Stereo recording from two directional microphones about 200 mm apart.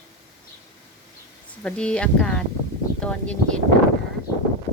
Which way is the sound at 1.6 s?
5° left (ahead or behind).